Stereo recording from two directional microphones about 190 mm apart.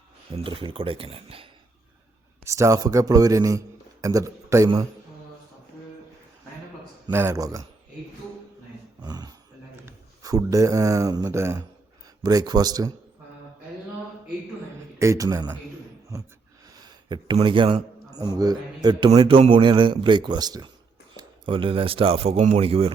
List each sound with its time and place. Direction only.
0.3 s speech: 25° right (ahead or behind)
2.4 s a man's voice: 15° right (ahead or behind)
7.1 s a man's voice: 15° right (ahead or behind)
9.0 s a sound: 20° right (ahead or behind)
9.8 s speech: 20° right (ahead or behind)
14.9 s a man's voice: 15° right (ahead or behind)
16.8 s a man's voice: 25° right (ahead or behind)